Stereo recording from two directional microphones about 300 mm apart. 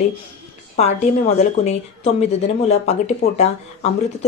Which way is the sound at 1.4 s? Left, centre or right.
Left.